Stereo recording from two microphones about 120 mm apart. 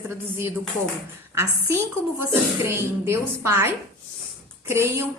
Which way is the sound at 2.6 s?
20° right (ahead or behind).